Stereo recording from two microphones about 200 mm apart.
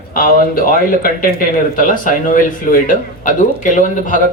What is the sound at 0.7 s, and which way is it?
Speech, 45° left (ahead or behind).